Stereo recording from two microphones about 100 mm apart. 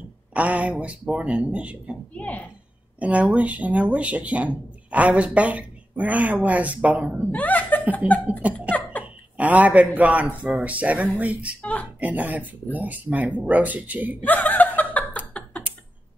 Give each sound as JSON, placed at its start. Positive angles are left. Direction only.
{"t": 0.3, "sound": "speech", "side_deg": -15}
{"t": 2.1, "sound": "a woman's voice", "side_deg": 15}
{"t": 3.0, "sound": "speech", "side_deg": -15}
{"t": 7.2, "sound": "speech", "side_deg": 15}
{"t": 8.3, "sound": "speech", "side_deg": -15}
{"t": 11.6, "sound": "speech", "side_deg": 15}
{"t": 12.0, "sound": "speech", "side_deg": -15}
{"t": 14.2, "sound": "chuckle", "side_deg": 15}